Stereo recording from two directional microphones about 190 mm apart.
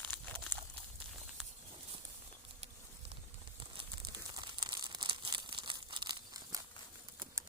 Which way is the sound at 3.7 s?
20° right (ahead or behind).